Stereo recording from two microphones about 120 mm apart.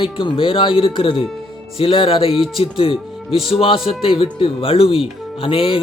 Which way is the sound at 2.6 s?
50° left (ahead or behind).